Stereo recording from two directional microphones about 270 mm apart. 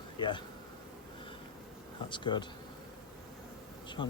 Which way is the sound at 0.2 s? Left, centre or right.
Centre.